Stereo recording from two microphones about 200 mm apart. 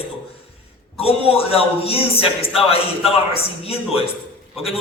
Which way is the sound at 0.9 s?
30° left (ahead or behind).